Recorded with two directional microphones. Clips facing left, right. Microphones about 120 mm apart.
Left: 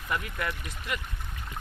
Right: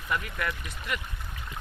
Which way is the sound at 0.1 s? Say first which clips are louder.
Right 1 dB; 25° left (ahead or behind).